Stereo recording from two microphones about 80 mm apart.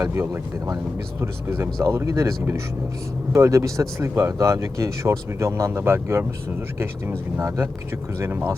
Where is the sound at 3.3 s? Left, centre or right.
Right.